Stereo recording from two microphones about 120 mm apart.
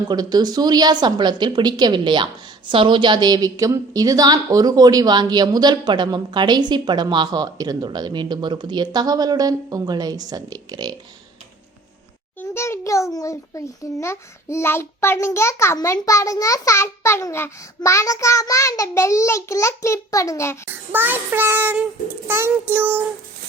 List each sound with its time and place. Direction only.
0.1 s a woman's voice: 35° right (ahead or behind)
12.4 s a sound: 20° left (ahead or behind)
13.1 s a child's voice: 25° left (ahead or behind)
20.7 s a child's voice: 15° right (ahead or behind)